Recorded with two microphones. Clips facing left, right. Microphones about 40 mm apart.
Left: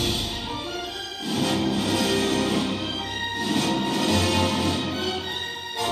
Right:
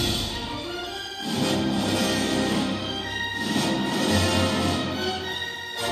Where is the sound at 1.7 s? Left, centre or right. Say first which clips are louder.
Left 1 dB; left.